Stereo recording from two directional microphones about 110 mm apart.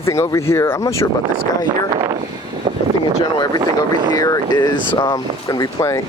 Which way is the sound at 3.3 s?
40° left (ahead or behind).